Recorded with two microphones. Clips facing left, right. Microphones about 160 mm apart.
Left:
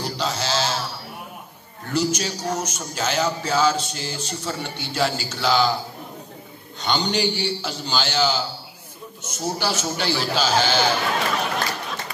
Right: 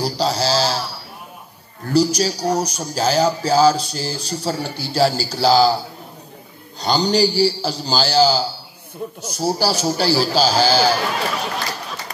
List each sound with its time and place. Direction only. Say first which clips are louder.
0.0 s a sound: right 6 dB; 35° right (ahead or behind)
1.9 s speech: right 6 dB; 35° right (ahead or behind)
6.8 s speech: right 6 dB; 35° right (ahead or behind)